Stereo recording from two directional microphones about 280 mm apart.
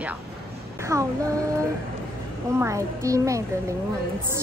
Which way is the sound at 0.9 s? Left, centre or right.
Centre.